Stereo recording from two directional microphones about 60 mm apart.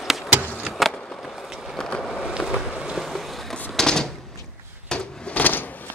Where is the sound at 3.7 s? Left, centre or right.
Centre.